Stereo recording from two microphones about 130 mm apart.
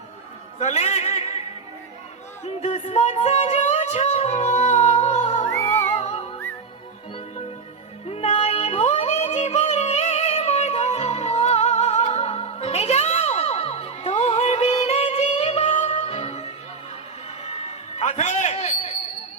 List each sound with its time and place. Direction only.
0.6 s a sound: 60° left (ahead or behind)
2.4 s music: 60° left (ahead or behind)
8.1 s music: 50° left (ahead or behind)